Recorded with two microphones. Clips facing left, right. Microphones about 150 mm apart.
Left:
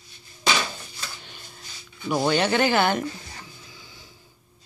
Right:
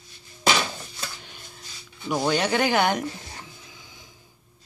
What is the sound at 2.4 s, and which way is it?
Speech, 10° right (ahead or behind).